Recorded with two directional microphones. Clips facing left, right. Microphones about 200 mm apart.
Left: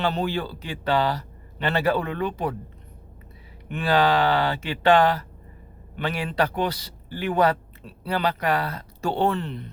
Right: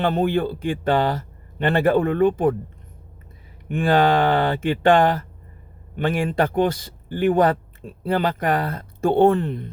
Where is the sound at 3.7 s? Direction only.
50° right (ahead or behind).